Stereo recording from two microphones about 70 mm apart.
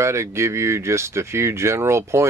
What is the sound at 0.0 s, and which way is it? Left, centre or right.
Speech, right.